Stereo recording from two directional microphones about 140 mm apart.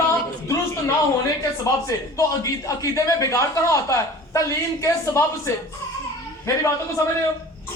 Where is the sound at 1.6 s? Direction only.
25° left (ahead or behind).